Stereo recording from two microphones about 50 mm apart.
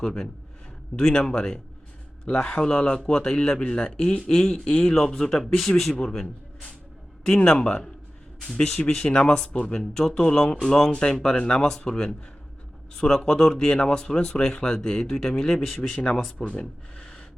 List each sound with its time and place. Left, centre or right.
0.9 s speech: centre
7.3 s speech: centre
16.1 s speech: centre